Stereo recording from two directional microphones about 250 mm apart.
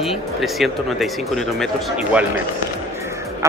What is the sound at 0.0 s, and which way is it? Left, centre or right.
Speech, centre.